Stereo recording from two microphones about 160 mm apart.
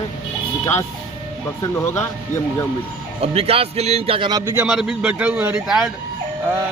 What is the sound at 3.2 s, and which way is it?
Speech, 40° right (ahead or behind).